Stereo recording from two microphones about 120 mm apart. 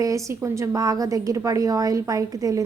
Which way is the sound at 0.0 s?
25° right (ahead or behind).